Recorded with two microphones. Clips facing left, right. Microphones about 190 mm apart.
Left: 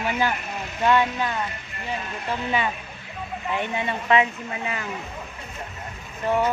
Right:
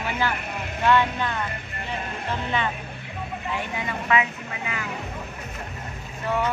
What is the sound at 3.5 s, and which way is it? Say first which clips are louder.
Speech: left 5 dB; 25° left (ahead or behind).